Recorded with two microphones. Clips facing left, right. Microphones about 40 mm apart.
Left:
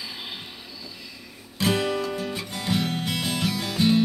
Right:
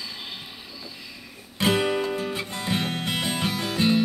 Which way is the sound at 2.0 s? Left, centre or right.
Right.